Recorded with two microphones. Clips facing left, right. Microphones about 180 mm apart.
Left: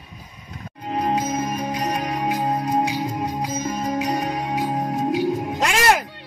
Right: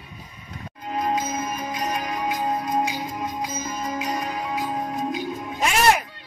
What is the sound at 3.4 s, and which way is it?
Music, 65° left (ahead or behind).